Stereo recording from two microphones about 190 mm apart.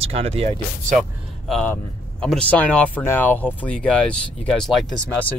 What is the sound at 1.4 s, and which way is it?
Speech, centre (ahead or behind).